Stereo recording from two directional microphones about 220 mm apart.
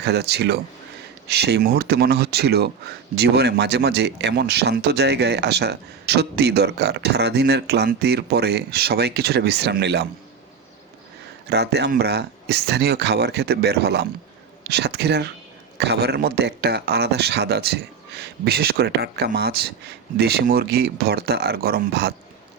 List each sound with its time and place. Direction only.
0.0 s speech: 50° right (ahead or behind)
11.4 s speech: 50° right (ahead or behind)